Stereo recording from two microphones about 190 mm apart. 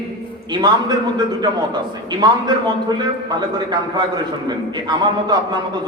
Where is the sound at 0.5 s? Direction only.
20° right (ahead or behind).